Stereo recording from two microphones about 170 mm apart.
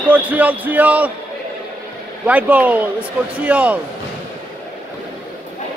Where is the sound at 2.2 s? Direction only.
10° right (ahead or behind).